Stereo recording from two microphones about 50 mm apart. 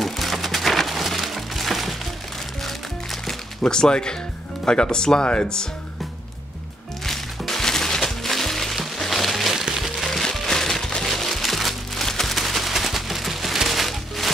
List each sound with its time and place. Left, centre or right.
0.0 s music: centre
4.6 s speech: centre
7.1 s music: centre